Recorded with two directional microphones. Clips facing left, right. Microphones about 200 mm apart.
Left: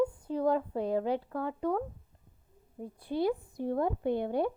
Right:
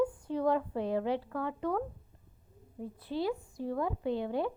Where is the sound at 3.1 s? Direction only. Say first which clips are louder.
Left 3 dB; 10° left (ahead or behind).